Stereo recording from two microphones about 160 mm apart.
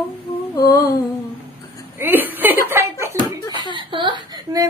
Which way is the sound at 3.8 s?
30° right (ahead or behind).